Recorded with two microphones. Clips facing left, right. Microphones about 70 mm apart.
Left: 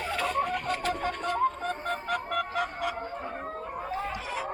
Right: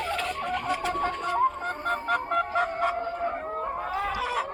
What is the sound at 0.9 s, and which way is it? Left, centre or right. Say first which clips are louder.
Music: right 2 dB; right.